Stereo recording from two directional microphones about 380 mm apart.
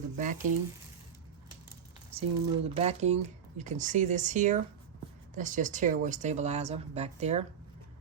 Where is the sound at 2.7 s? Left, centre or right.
Centre.